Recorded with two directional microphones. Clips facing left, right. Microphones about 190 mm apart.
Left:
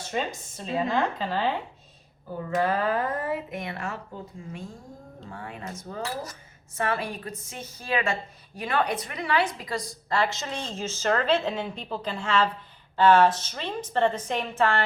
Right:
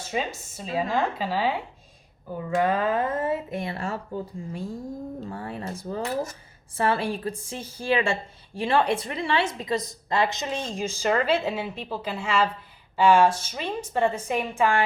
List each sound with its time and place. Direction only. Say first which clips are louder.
0.1 s speech: right 1 dB; 5° right (ahead or behind)
2.6 s speech: right 2 dB; 20° right (ahead or behind)